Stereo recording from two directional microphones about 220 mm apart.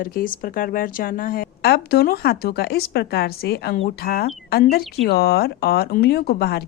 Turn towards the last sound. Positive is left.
turn(degrees=45)  # may be behind; listen again after turning